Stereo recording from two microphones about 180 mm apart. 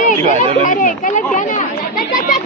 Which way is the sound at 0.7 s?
45° left (ahead or behind).